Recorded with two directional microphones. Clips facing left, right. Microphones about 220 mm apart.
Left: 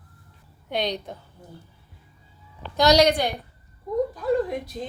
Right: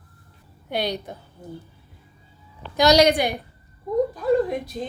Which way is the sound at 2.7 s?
10° right (ahead or behind).